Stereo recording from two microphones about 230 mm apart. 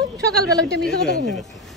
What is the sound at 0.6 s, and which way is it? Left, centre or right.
Speech, centre.